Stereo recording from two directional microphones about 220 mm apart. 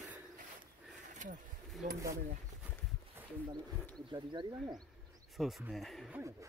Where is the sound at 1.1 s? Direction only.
35° right (ahead or behind).